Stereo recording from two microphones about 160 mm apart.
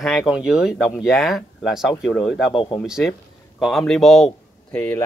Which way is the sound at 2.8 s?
5° right (ahead or behind).